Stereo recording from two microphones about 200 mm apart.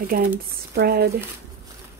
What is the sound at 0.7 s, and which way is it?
Speech, 50° right (ahead or behind).